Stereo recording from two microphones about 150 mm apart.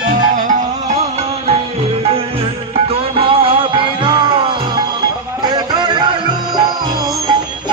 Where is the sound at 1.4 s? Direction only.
40° right (ahead or behind).